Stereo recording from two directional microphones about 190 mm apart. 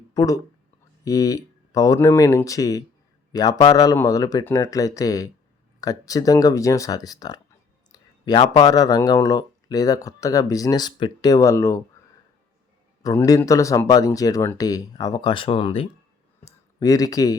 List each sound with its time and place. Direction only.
0.1 s speech: 20° left (ahead or behind)
13.0 s speech: 20° left (ahead or behind)
16.4 s speech: 20° left (ahead or behind)